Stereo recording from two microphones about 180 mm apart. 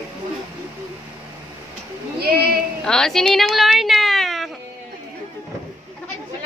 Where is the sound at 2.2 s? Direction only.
60° right (ahead or behind).